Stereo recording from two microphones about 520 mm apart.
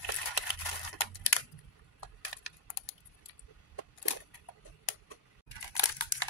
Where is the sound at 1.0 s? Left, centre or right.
Left.